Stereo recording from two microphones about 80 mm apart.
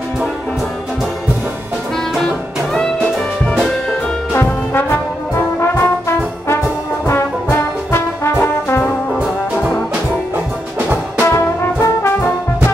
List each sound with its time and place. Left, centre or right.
4.3 s brass instrument: left
11.3 s brass instrument: left